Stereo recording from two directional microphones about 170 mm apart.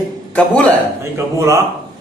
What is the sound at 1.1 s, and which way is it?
Speech, 15° right (ahead or behind).